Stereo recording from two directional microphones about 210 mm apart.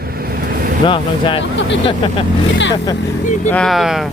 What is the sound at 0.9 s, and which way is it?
Speech, 25° left (ahead or behind).